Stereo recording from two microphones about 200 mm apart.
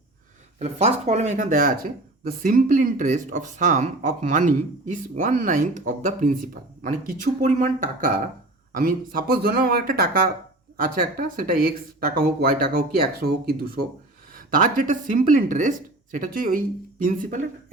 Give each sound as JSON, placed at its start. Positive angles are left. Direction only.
{"t": 0.6, "sound": "speech", "side_deg": -30}